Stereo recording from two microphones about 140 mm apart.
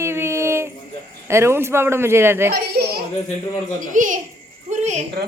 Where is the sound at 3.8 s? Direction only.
65° right (ahead or behind).